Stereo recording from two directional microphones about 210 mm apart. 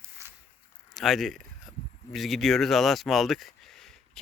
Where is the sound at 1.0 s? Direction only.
Centre (ahead or behind).